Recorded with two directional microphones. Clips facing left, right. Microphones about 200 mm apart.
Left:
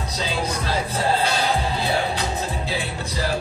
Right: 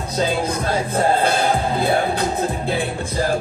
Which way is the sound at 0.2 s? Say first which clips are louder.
Right 6 dB; 50° right (ahead or behind).